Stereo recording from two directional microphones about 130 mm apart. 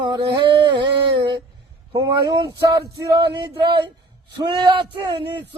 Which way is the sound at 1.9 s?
30° right (ahead or behind).